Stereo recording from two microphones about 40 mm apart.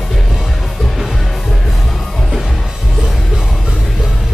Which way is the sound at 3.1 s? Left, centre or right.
Centre.